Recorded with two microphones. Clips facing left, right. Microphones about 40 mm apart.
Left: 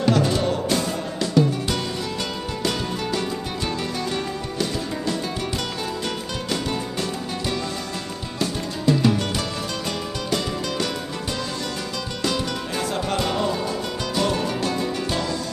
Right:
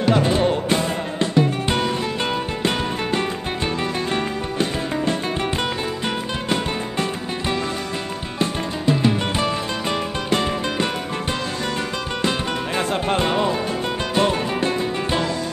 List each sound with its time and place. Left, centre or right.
0.1 s music: right
8.4 s music: right
12.3 s music: right